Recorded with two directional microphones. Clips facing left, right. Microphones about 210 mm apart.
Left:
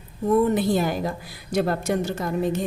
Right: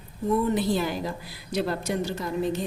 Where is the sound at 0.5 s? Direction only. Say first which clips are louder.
Left 3 dB; 50° left (ahead or behind).